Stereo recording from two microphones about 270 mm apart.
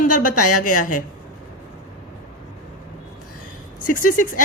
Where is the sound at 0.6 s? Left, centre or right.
Left.